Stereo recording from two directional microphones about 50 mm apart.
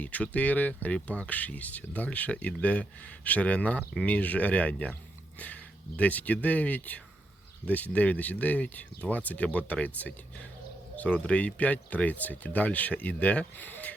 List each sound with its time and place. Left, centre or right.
0.0 s speech: left
6.0 s speech: left